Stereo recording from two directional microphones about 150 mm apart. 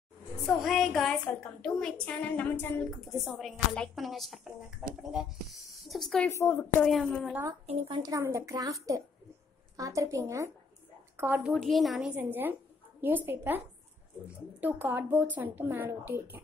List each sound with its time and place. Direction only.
0.5 s speech: centre (ahead or behind)
3.0 s speech: centre (ahead or behind)
6.3 s speech: 15° left (ahead or behind); by 7.3 s centre (ahead or behind)
7.9 s a woman's voice: 25° right (ahead or behind)
11.6 s speech: centre (ahead or behind)
12.2 s speech: 15° right (ahead or behind)
14.6 s speech: 10° right (ahead or behind)